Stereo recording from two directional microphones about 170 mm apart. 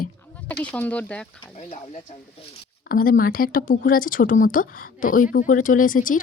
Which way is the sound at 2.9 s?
55° left (ahead or behind).